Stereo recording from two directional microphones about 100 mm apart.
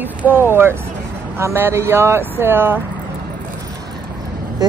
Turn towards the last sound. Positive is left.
turn(degrees=-40)  # may be behind; listen again after turning